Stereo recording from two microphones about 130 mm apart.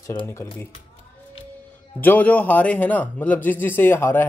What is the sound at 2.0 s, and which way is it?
Speech, 15° left (ahead or behind).